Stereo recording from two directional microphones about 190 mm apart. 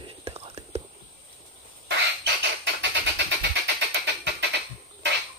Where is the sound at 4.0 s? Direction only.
70° right (ahead or behind).